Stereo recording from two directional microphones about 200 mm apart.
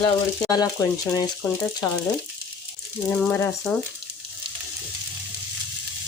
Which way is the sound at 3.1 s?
5° left (ahead or behind).